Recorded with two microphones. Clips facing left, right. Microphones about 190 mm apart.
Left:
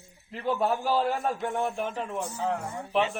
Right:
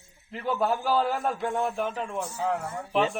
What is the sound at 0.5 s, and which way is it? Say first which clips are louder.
A man's voice: right 2 dB; centre (ahead or behind).